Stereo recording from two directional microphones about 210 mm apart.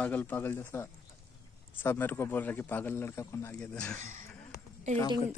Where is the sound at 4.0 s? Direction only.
35° right (ahead or behind).